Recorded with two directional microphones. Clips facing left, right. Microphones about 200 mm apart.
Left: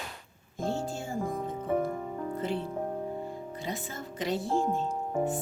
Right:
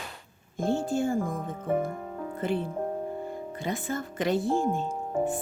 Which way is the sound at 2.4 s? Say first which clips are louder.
Right 6 dB; 55° right (ahead or behind).